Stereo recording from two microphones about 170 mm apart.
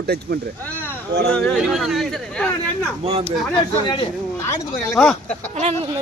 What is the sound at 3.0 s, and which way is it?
Speech, 35° right (ahead or behind).